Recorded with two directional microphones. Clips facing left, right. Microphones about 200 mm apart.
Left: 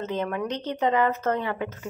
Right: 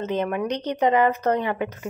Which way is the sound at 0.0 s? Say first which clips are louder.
Right 3 dB; 15° right (ahead or behind).